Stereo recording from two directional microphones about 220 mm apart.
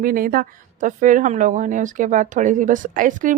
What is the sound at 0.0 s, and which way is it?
Speech, 40° right (ahead or behind).